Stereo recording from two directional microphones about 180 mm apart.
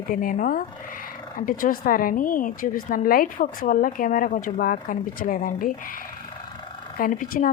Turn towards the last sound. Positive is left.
turn(degrees=50)  # may be behind; listen again after turning